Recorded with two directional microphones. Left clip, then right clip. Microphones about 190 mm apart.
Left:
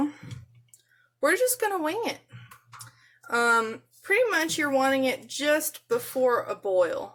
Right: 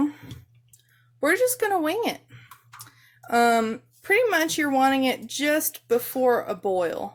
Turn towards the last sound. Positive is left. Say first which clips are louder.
# even
turn(degrees=-40)  # may be behind; listen again after turning